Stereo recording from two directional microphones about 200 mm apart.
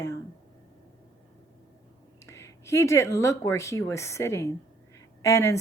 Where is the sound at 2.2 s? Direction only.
15° left (ahead or behind).